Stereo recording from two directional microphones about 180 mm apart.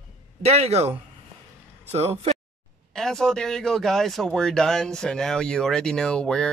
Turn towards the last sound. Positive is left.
turn(degrees=5)  # may be behind; listen again after turning